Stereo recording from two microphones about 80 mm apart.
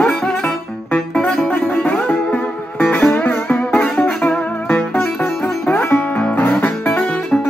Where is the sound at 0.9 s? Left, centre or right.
Centre.